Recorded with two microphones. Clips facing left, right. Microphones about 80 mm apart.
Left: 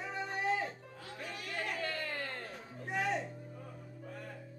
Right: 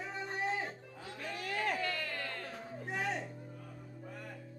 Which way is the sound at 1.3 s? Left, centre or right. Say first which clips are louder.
Right 5 dB; right.